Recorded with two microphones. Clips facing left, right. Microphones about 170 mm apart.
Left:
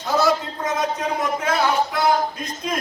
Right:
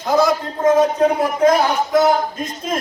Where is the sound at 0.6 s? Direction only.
30° right (ahead or behind).